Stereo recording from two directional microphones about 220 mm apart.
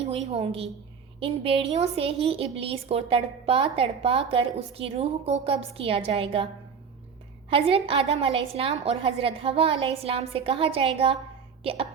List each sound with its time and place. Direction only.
0.0 s a woman's voice: 25° right (ahead or behind)
7.5 s a woman's voice: 25° right (ahead or behind)